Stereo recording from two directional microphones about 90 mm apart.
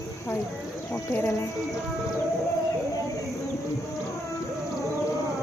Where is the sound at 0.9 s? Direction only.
25° left (ahead or behind).